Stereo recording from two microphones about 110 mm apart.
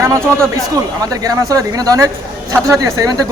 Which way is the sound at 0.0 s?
30° right (ahead or behind).